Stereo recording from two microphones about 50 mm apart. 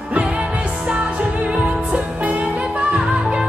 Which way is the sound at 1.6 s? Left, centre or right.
Right.